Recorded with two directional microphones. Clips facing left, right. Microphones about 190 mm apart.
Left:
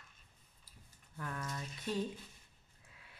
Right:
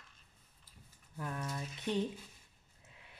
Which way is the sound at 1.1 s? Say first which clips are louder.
Right 2 dB; 20° right (ahead or behind).